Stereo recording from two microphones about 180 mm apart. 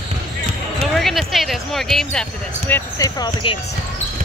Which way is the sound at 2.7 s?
15° left (ahead or behind).